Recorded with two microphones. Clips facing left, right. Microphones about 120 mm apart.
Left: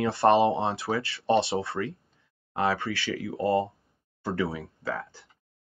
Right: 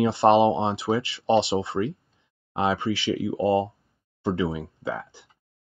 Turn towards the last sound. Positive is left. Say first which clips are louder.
# right 2 dB
turn(degrees=-20)  # may be behind; listen again after turning